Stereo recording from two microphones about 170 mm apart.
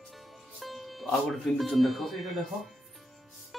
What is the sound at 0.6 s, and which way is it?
Speech, centre (ahead or behind).